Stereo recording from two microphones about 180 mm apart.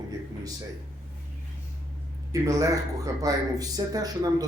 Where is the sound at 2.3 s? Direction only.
20° right (ahead or behind).